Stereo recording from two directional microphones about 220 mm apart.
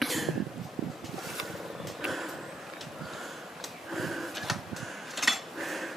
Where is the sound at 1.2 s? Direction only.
Centre (ahead or behind).